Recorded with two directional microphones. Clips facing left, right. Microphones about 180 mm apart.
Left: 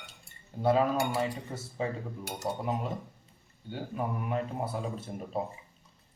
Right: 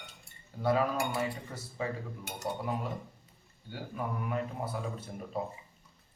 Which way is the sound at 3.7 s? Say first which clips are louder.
Left 3 dB; 25° left (ahead or behind).